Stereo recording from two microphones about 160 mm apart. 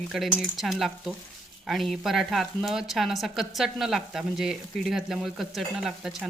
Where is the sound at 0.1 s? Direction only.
Centre (ahead or behind).